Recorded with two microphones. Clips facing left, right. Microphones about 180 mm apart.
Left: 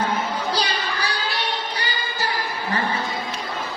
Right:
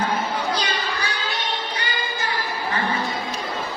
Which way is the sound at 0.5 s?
35° left (ahead or behind).